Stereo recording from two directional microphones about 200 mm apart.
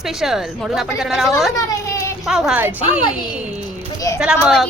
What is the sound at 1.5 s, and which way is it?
Speech, 15° left (ahead or behind).